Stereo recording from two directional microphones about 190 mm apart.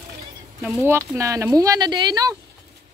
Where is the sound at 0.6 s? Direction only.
10° right (ahead or behind).